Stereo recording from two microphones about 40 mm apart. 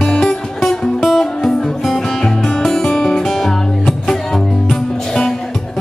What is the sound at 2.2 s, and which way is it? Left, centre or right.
Music, centre.